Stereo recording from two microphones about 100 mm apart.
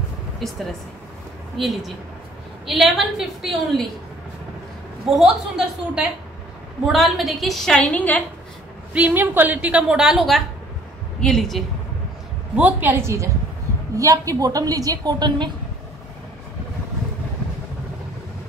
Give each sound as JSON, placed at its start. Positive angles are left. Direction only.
{"t": 0.4, "sound": "a woman's voice", "side_deg": 5}
{"t": 1.6, "sound": "a woman's voice", "side_deg": 0}
{"t": 5.1, "sound": "a woman's voice", "side_deg": -5}
{"t": 8.9, "sound": "a woman's voice", "side_deg": -15}
{"t": 12.5, "sound": "a woman's voice", "side_deg": -15}